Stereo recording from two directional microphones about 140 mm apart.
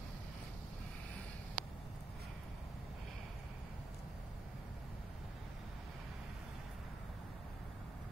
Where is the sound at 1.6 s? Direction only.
75° right (ahead or behind).